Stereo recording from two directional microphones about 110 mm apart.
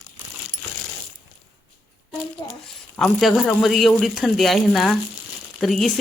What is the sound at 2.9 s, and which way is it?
Speech, 5° left (ahead or behind).